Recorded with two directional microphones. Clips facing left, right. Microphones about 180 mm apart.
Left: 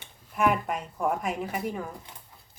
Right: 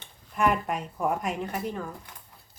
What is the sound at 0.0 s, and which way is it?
Speech, 5° left (ahead or behind).